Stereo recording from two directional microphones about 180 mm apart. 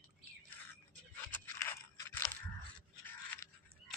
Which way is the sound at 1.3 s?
10° left (ahead or behind).